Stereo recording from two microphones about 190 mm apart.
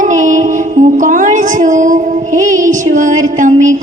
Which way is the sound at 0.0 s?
40° right (ahead or behind).